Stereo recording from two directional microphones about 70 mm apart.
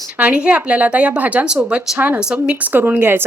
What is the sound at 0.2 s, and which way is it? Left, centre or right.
Speech, centre.